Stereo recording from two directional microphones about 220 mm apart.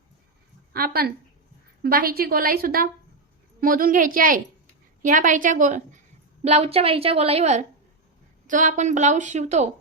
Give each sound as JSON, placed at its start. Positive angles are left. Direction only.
{"t": 0.7, "sound": "a woman's voice", "side_deg": -45}